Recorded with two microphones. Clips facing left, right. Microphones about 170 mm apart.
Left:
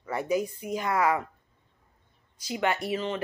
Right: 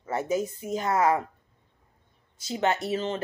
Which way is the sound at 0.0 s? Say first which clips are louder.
Even; 25° right (ahead or behind).